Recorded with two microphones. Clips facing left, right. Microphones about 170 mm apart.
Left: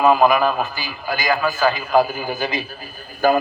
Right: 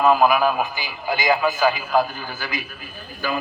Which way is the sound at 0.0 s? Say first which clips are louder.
Left 2 dB; centre (ahead or behind).